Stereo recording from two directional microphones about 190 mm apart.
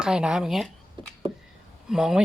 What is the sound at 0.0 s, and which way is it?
Speech, 5° right (ahead or behind).